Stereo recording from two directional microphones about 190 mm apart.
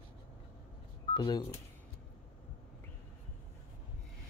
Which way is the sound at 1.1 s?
25° left (ahead or behind).